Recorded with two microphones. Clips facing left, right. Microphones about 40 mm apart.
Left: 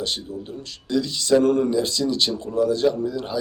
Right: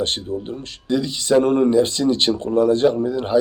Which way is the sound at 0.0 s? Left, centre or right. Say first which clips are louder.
Right 5 dB; right.